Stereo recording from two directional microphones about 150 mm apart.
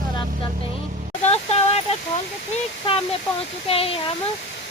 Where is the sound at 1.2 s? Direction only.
45° left (ahead or behind).